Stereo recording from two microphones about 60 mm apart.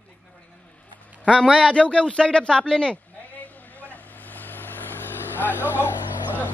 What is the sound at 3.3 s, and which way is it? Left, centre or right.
Vehicle, left.